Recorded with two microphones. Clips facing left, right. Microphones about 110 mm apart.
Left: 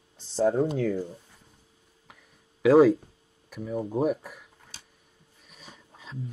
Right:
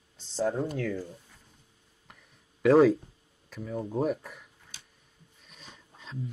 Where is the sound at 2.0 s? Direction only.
5° left (ahead or behind).